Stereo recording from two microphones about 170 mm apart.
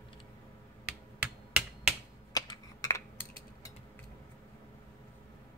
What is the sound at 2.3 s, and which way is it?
Computer keyboard, 20° left (ahead or behind).